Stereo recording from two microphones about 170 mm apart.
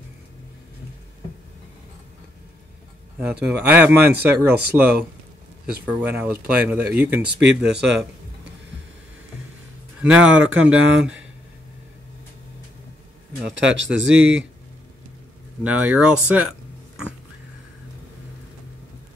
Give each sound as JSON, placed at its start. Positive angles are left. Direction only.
{"t": 3.4, "sound": "speech", "side_deg": -10}
{"t": 7.2, "sound": "speech", "side_deg": -90}
{"t": 9.9, "sound": "speech", "side_deg": -5}
{"t": 13.6, "sound": "speech", "side_deg": -90}
{"t": 15.6, "sound": "speech", "side_deg": -5}